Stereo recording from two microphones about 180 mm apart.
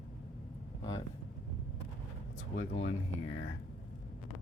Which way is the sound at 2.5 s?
65° left (ahead or behind).